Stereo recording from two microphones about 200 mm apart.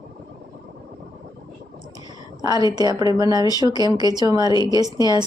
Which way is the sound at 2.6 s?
20° right (ahead or behind).